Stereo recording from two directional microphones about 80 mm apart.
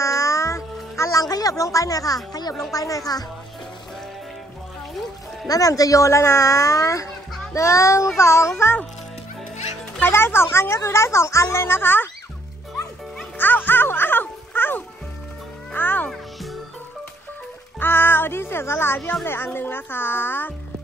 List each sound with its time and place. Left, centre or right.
0.0 s music: left
1.3 s speech: left
5.5 s speech: left
10.0 s speech: left
13.4 s music: left
16.1 s music: centre
17.7 s speech: left